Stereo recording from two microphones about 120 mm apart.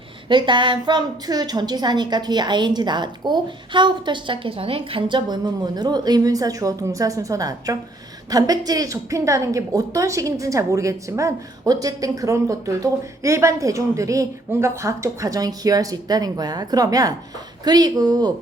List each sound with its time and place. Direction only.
0.3 s a woman's voice: 40° right (ahead or behind)